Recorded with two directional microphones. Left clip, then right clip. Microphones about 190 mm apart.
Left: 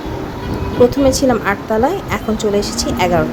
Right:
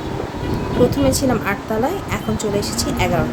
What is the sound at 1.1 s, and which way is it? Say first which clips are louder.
A woman's voice: left 5 dB; 20° left (ahead or behind).